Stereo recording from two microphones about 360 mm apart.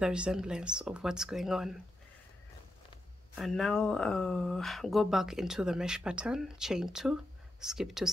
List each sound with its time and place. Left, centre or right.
0.0 s speech: centre
3.3 s speech: centre